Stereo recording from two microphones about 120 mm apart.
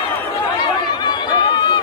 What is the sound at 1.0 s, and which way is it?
Chatter, 40° left (ahead or behind).